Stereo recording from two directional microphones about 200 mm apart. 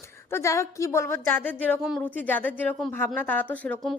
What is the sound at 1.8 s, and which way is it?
Speech, 5° right (ahead or behind).